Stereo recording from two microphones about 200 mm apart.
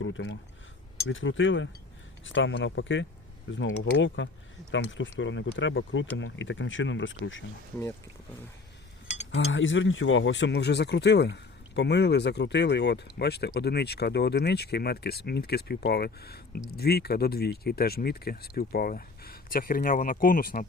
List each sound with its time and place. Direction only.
0.0 s speech: 70° left (ahead or behind)
9.3 s speech: 70° left (ahead or behind); by 20.7 s 45° left (ahead or behind)